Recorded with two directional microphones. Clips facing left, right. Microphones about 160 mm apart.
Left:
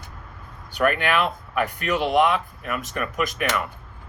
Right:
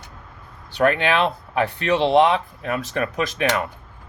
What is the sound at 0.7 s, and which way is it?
Speech, 25° right (ahead or behind).